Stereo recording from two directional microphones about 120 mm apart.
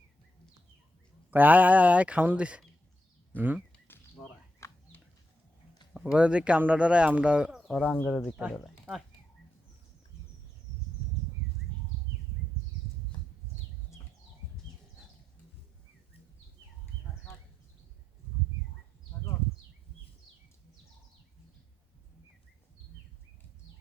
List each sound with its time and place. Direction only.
1.3 s speech: 15° right (ahead or behind)
4.6 s chicken: 20° left (ahead or behind)
5.9 s speech: 5° right (ahead or behind)
7.8 s speech: 10° left (ahead or behind)
8.9 s speech: 15° right (ahead or behind)